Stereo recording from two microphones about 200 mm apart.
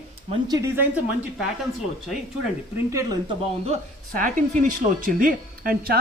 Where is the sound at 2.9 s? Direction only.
20° right (ahead or behind).